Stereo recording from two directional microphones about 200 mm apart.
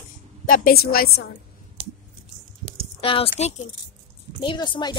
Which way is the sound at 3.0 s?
25° left (ahead or behind).